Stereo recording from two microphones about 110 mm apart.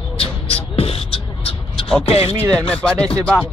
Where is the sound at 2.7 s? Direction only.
10° left (ahead or behind).